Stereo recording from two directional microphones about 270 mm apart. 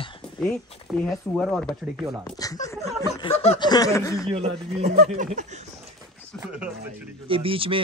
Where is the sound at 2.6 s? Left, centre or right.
Centre.